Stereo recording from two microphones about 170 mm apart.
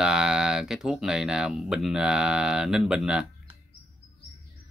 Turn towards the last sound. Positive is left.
turn(degrees=-5)  # may be behind; listen again after turning